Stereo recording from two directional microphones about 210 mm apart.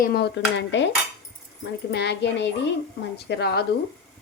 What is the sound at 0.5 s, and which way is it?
Cutlery, 55° left (ahead or behind).